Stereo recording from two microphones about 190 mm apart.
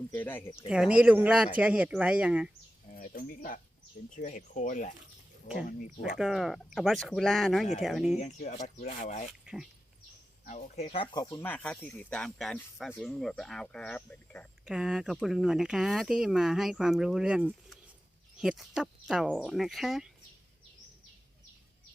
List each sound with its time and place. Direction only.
0.1 s speech: 10° left (ahead or behind)
0.7 s speech: 5° right (ahead or behind)
2.9 s speech: 50° left (ahead or behind)
6.0 s speech: centre (ahead or behind)
8.2 s speech: 35° left (ahead or behind)
10.4 s speech: 40° left (ahead or behind)
10.8 s speech: 25° left (ahead or behind); by 14.4 s 5° left (ahead or behind)
14.6 s speech: 5° right (ahead or behind)